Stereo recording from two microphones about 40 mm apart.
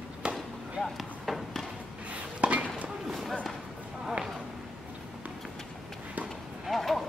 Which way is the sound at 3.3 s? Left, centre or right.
Centre.